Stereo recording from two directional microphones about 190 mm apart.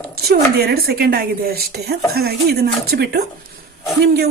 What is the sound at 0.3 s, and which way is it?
A woman's voice, 55° right (ahead or behind).